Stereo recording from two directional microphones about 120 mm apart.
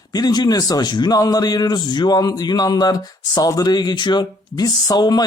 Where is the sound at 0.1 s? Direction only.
35° left (ahead or behind).